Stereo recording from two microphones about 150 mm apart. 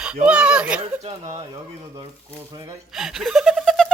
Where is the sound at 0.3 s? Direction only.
5° right (ahead or behind).